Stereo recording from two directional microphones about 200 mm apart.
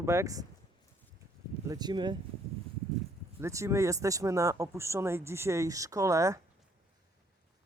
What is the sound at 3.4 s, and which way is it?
Speech, 15° right (ahead or behind).